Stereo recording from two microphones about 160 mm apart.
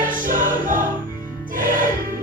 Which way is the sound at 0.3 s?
55° right (ahead or behind).